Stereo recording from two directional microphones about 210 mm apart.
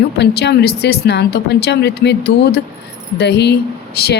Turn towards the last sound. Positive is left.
turn(degrees=50)  # may be behind; listen again after turning